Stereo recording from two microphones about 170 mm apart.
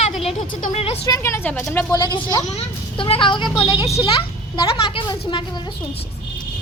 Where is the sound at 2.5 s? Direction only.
35° left (ahead or behind).